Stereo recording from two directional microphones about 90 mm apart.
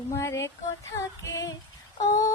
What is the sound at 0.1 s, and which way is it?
Female singing, 30° left (ahead or behind).